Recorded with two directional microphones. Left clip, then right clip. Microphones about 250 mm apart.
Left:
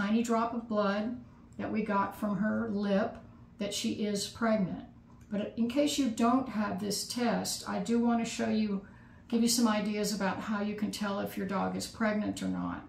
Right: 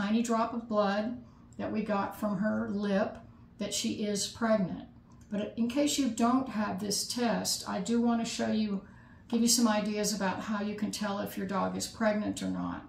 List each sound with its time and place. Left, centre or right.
0.0 s speech: centre